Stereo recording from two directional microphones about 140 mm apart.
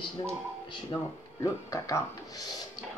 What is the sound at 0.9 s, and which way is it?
Speech, 25° left (ahead or behind).